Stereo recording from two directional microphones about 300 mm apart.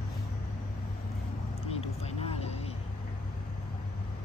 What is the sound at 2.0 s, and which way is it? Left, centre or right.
Vehicle, left.